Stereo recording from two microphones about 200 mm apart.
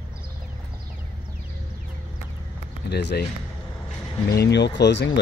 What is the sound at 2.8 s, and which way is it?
Speech, 55° left (ahead or behind).